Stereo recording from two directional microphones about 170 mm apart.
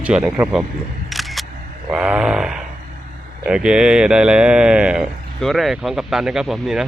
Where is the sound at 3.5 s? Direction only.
5° right (ahead or behind).